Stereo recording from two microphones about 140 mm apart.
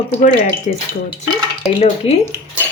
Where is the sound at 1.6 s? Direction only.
45° left (ahead or behind).